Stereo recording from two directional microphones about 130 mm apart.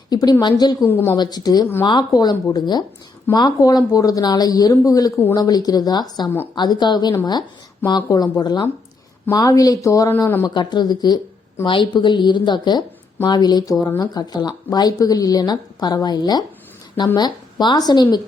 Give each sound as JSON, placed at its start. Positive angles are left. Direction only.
{"t": 0.1, "sound": "speech", "side_deg": 30}
{"t": 0.9, "sound": "a woman's voice", "side_deg": 15}
{"t": 1.1, "sound": "speech", "side_deg": 30}
{"t": 10.4, "sound": "speech", "side_deg": 35}